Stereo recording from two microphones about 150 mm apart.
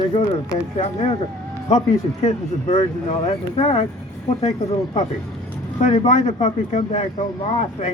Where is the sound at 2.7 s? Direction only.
40° left (ahead or behind).